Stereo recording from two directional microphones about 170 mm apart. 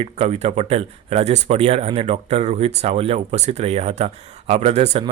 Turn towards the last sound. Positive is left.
turn(degrees=-40)  # may be behind; listen again after turning